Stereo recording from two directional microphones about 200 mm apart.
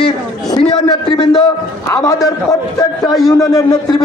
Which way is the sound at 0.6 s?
20° left (ahead or behind).